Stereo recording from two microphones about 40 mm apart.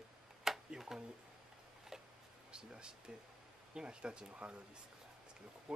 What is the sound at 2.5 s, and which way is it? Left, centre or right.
Speech, right.